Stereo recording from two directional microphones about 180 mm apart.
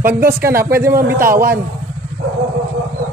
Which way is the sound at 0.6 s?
15° right (ahead or behind).